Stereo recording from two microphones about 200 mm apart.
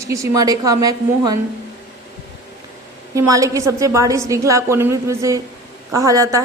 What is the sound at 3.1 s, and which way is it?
A woman's voice, 15° right (ahead or behind).